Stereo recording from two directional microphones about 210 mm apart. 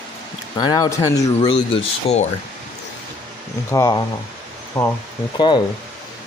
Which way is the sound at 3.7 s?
15° left (ahead or behind).